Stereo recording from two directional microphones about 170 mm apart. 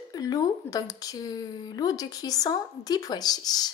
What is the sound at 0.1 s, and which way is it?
Speech, 20° left (ahead or behind).